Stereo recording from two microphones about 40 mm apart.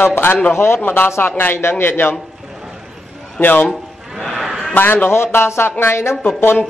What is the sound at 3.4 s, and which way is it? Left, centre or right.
Speech, left.